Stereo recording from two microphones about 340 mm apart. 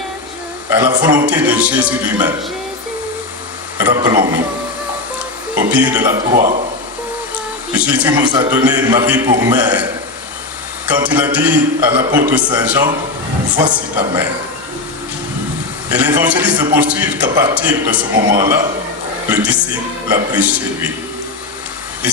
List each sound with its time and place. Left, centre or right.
0.7 s a man's voice: centre
3.8 s a man's voice: centre
5.7 s a man's voice: centre
6.3 s speech: centre
7.7 s a man's voice: centre
10.8 s a man's voice: centre
15.9 s a man's voice: centre